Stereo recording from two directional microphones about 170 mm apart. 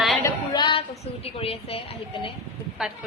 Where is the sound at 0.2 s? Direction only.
25° left (ahead or behind).